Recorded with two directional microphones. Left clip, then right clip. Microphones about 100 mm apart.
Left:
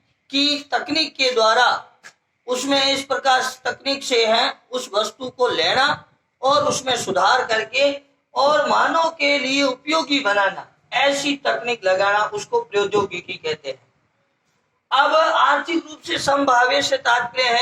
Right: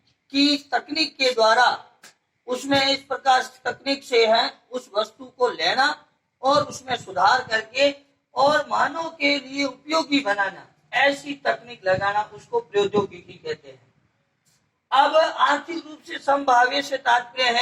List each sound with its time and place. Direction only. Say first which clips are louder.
0.3 s a man's voice: left 1 dB; 55° left (ahead or behind)
2.6 s speech: left 2 dB; 35° left (ahead or behind)
3.3 s a man's voice: left 2 dB; 50° left (ahead or behind)
14.8 s a man's voice: left 2 dB; 45° left (ahead or behind)